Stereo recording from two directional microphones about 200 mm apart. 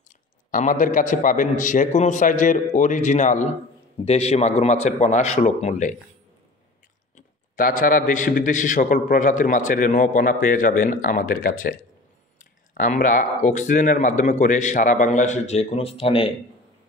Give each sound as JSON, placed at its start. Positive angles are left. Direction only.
{"t": 0.5, "sound": "a man's voice", "side_deg": 40}
{"t": 7.2, "sound": "a man's voice", "side_deg": 40}